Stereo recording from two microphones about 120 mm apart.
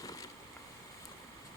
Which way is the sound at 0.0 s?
30° left (ahead or behind).